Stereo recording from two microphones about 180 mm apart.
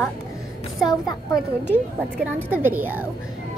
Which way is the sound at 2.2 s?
10° right (ahead or behind).